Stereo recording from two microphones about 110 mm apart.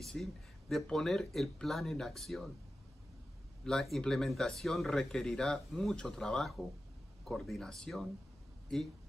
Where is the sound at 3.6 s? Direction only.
5° left (ahead or behind).